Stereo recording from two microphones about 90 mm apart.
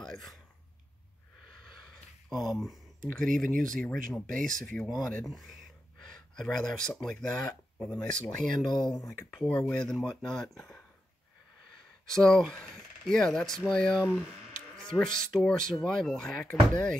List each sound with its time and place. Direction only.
0.0 s speech: centre (ahead or behind)
2.2 s speech: centre (ahead or behind)
5.2 s a sound: centre (ahead or behind)
7.0 s speech: 5° left (ahead or behind)
8.6 s speech: 55° left (ahead or behind)
9.4 s speech: 10° left (ahead or behind)
12.1 s speech: 5° left (ahead or behind)